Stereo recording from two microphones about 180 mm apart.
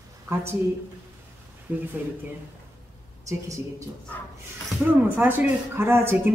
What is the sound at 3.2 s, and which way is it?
Speech, 20° right (ahead or behind).